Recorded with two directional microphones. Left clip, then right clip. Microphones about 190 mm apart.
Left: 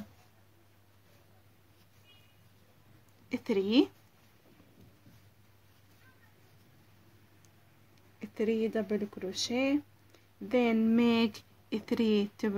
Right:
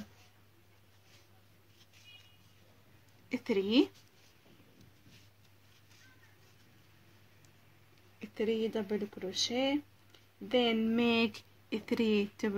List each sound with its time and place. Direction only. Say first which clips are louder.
3.3 s speech: left 1 dB; 5° left (ahead or behind)
8.2 s speech: left 2 dB; 15° left (ahead or behind)